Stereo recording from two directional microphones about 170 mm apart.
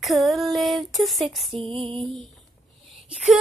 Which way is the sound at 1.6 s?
35° right (ahead or behind).